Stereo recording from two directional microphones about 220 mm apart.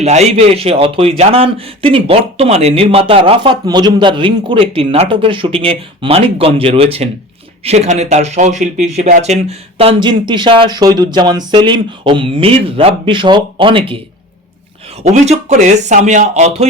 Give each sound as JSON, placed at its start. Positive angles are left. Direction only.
{"t": 0.0, "sound": "a man's voice", "side_deg": -30}
{"t": 15.0, "sound": "speech", "side_deg": -30}